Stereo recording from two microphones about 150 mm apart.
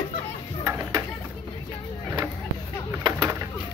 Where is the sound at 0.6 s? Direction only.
20° right (ahead or behind).